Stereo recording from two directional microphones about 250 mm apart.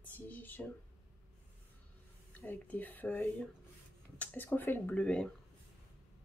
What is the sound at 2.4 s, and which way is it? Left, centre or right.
Speech, centre.